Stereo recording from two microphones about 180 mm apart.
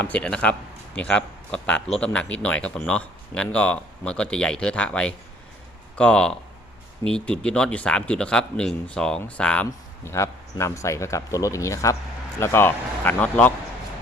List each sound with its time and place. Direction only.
0.0 s speech: 5° left (ahead or behind)